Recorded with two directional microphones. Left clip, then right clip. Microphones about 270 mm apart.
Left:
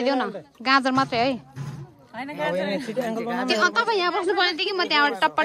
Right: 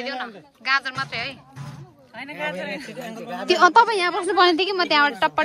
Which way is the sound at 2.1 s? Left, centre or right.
Left.